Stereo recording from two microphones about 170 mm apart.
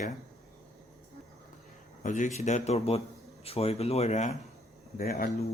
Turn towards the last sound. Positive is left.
turn(degrees=60)  # may be behind; listen again after turning